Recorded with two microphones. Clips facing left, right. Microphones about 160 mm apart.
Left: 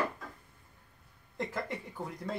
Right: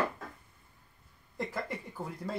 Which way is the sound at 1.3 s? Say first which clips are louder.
Even; centre (ahead or behind).